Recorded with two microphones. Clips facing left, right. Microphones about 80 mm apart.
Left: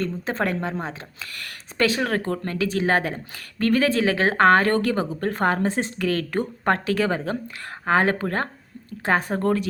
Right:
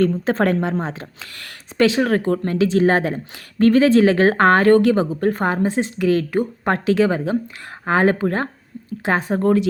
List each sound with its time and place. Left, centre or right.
0.0 s a woman's voice: right; by 6.7 s centre
6.8 s a woman's voice: right